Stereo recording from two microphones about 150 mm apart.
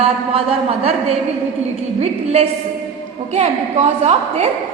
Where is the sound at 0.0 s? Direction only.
40° right (ahead or behind).